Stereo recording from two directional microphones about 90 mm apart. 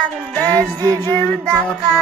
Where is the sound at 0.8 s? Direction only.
45° right (ahead or behind).